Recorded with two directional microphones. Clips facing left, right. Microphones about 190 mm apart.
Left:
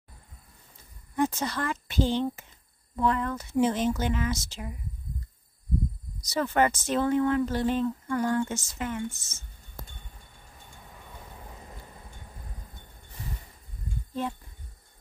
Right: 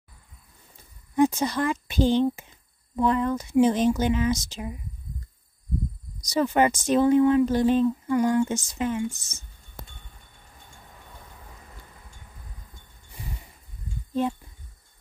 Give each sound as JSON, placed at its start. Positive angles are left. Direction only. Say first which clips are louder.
{"t": 1.1, "sound": "a woman's voice", "louder": "right 6 dB", "side_deg": -15}
{"t": 6.2, "sound": "speech", "louder": "right 3 dB", "side_deg": -15}
{"t": 11.5, "sound": "vehicle", "louder": "left 3 dB", "side_deg": 25}